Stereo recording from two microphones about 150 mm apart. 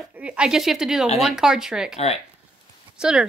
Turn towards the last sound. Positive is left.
turn(degrees=-5)  # may be behind; listen again after turning